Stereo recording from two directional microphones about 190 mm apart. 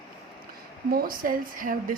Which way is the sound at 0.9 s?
50° right (ahead or behind).